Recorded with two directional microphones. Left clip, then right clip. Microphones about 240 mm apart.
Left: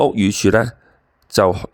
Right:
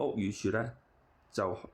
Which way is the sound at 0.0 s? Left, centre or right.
Left.